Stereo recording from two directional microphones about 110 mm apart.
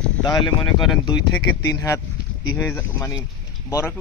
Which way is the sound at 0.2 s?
40° left (ahead or behind).